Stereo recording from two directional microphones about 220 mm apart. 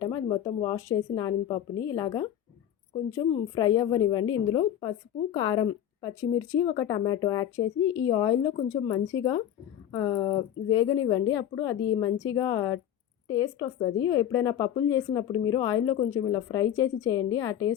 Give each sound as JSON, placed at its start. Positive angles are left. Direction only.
{"t": 0.0, "sound": "a woman's voice", "side_deg": 20}